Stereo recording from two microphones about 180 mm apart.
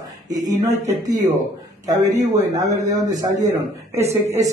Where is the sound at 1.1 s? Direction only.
20° right (ahead or behind).